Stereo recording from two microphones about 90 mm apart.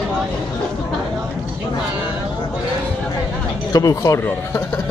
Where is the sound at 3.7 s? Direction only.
40° left (ahead or behind).